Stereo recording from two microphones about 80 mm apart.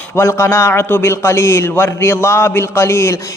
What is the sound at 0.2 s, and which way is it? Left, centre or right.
A man's voice, left.